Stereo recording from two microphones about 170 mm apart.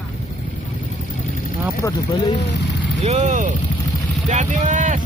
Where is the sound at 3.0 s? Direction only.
40° right (ahead or behind).